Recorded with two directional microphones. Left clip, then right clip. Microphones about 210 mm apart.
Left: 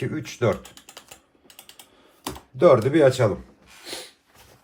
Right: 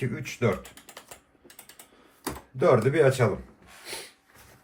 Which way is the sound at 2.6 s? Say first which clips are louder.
Left 5 dB; 45° left (ahead or behind).